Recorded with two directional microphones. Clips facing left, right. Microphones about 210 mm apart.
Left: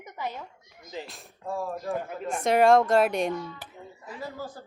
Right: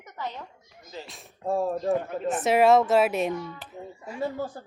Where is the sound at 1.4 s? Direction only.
30° right (ahead or behind).